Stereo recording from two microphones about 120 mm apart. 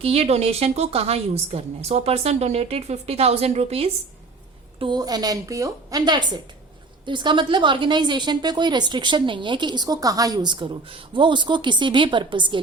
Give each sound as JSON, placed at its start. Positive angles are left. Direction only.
{"t": 0.0, "sound": "a woman's voice", "side_deg": -55}
{"t": 4.8, "sound": "a woman's voice", "side_deg": -35}